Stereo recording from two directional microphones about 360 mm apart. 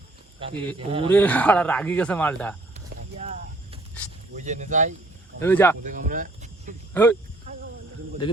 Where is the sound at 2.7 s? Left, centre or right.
Centre.